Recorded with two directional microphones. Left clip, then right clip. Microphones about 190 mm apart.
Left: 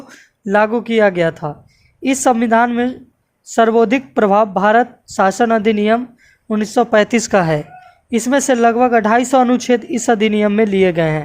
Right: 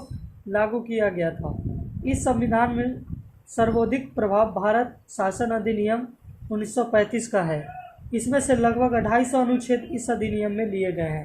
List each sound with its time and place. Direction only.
0.5 s speech: 50° left (ahead or behind)